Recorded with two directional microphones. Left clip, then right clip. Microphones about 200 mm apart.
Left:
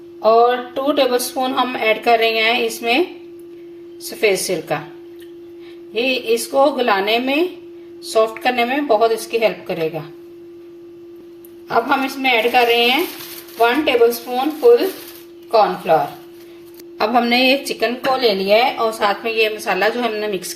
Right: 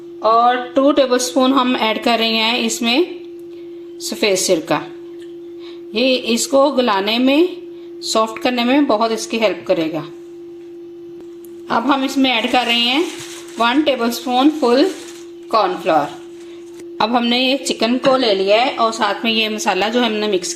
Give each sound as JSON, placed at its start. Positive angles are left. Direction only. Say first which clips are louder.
{"t": 0.2, "sound": "speech", "louder": "even", "side_deg": -35}
{"t": 4.2, "sound": "speech", "louder": "right 2 dB", "side_deg": -35}
{"t": 5.9, "sound": "speech", "louder": "right 1 dB", "side_deg": -40}
{"t": 11.7, "sound": "a woman's voice", "louder": "even", "side_deg": -45}
{"t": 17.0, "sound": "speech", "louder": "left 1 dB", "side_deg": -30}